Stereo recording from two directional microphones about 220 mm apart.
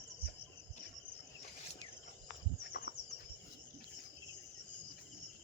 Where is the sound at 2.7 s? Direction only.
45° left (ahead or behind).